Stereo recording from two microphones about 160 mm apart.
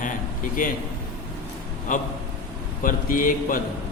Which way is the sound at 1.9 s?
55° left (ahead or behind).